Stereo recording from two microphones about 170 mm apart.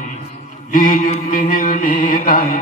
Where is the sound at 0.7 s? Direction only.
55° left (ahead or behind).